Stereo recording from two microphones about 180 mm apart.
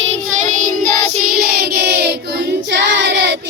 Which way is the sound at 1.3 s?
60° right (ahead or behind).